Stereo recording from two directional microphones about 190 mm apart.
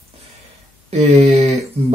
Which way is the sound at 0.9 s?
35° right (ahead or behind).